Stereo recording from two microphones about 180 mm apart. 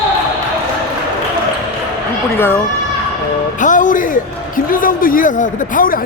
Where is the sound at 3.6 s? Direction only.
45° left (ahead or behind).